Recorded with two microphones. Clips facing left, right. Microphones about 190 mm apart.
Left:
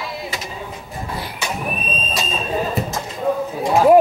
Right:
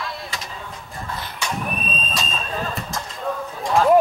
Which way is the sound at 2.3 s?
15° left (ahead or behind).